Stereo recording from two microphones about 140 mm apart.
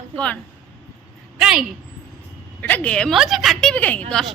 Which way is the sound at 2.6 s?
10° left (ahead or behind).